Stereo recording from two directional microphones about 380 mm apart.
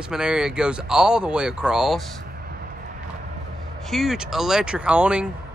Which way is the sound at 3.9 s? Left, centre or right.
Centre.